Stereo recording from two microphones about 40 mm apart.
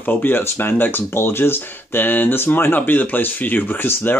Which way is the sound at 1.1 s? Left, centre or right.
Left.